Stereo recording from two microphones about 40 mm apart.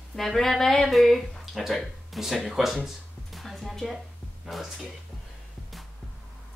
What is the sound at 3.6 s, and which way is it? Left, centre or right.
Speech, centre.